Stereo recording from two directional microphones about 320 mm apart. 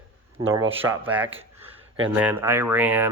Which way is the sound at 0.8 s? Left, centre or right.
Centre.